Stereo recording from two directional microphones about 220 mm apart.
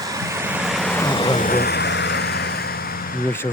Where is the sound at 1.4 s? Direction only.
40° left (ahead or behind).